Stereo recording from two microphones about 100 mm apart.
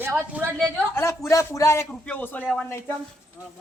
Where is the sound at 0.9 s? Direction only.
30° left (ahead or behind).